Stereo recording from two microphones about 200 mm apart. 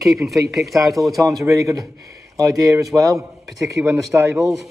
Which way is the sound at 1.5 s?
15° right (ahead or behind).